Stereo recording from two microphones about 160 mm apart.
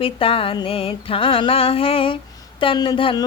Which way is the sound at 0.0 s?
35° left (ahead or behind).